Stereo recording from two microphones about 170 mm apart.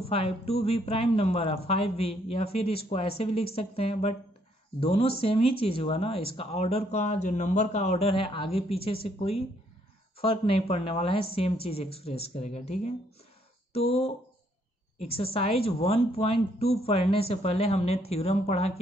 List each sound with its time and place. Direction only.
0.1 s speech: 35° left (ahead or behind)